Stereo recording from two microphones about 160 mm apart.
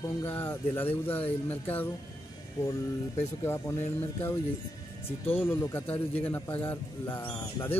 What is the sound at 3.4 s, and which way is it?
Speech, 15° left (ahead or behind).